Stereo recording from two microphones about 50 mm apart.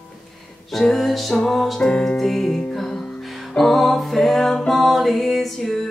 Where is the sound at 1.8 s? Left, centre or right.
Centre.